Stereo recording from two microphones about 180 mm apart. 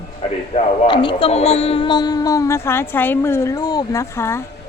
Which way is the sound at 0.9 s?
30° left (ahead or behind).